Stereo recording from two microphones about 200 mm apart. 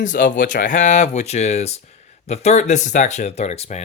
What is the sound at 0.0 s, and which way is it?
Speech, 40° left (ahead or behind).